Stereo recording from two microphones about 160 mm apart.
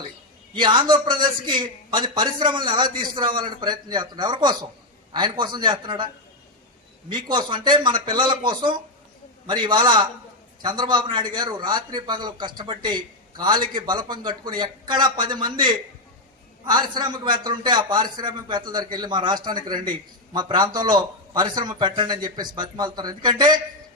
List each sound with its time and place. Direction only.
0.5 s a man's voice: 30° right (ahead or behind)
7.1 s a man's voice: 30° right (ahead or behind)